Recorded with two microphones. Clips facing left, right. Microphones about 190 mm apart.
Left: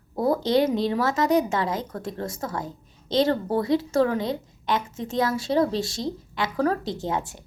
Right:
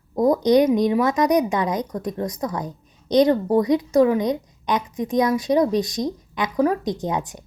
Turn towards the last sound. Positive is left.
turn(degrees=-15)  # may be behind; listen again after turning